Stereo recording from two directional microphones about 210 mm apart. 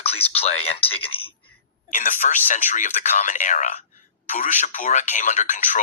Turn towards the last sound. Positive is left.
turn(degrees=35)  # may be behind; listen again after turning